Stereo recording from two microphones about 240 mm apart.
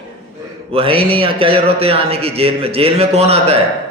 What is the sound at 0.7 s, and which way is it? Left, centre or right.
A man's voice, right.